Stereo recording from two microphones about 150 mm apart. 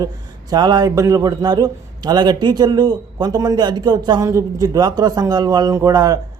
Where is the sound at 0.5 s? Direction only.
30° right (ahead or behind).